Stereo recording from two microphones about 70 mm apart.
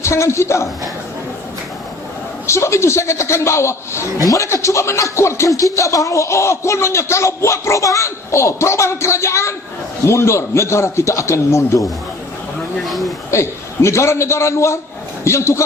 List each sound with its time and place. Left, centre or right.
0.0 s a man's voice: left
2.5 s a man's voice: left
12.8 s speech: centre
13.3 s a man's voice: left